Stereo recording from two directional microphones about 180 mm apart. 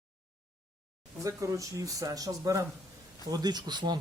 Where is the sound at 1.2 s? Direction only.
15° right (ahead or behind).